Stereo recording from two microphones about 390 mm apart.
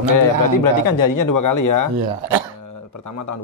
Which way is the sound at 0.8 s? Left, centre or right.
Left.